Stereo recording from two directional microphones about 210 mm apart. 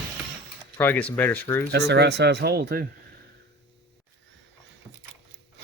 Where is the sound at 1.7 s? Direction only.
55° right (ahead or behind).